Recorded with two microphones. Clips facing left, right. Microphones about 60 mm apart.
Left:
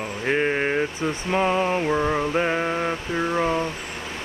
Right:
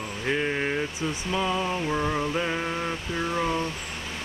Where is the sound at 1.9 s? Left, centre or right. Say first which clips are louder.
Left 4 dB; centre.